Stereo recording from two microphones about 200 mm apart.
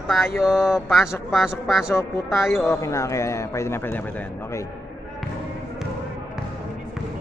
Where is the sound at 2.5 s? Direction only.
10° left (ahead or behind).